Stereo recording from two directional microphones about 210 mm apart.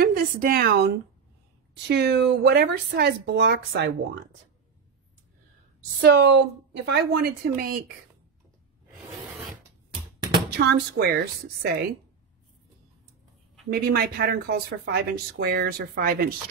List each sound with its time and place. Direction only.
0.0 s speech: 45° right (ahead or behind)
5.9 s speech: 50° right (ahead or behind)
10.6 s speech: 50° right (ahead or behind)
13.7 s speech: 45° right (ahead or behind)